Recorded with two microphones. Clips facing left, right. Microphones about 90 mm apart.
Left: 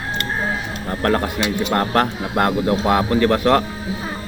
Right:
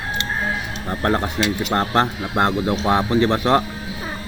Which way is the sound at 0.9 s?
20° right (ahead or behind).